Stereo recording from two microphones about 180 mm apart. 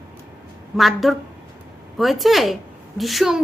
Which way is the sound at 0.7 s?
Centre (ahead or behind).